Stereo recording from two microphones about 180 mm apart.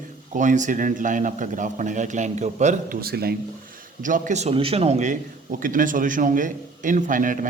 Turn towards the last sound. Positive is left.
turn(degrees=-45)  # may be behind; listen again after turning